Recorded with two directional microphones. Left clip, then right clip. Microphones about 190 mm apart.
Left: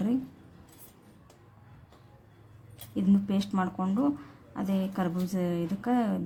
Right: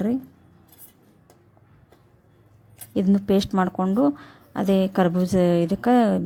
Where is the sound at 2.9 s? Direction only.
35° right (ahead or behind).